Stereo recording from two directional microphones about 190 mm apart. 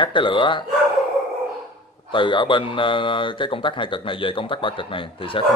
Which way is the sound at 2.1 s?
25° left (ahead or behind).